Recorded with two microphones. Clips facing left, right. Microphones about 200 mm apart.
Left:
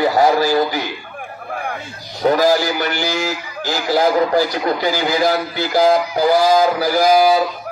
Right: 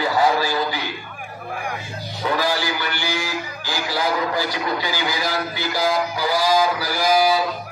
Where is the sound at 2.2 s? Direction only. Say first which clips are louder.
Left 8 dB; 45° left (ahead or behind).